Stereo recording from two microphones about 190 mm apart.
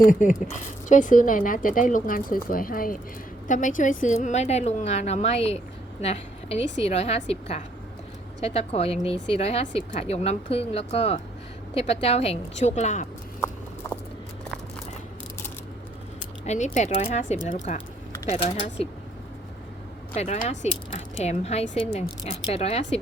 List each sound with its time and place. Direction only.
0.0 s a woman's voice: 45° left (ahead or behind)
8.4 s a woman's voice: 35° left (ahead or behind)
16.7 s a woman's voice: 35° left (ahead or behind)
20.1 s a woman's voice: 35° left (ahead or behind)